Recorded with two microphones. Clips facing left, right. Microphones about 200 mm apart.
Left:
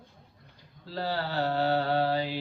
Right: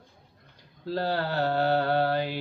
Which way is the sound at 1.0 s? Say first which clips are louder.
Right 1 dB; 55° right (ahead or behind).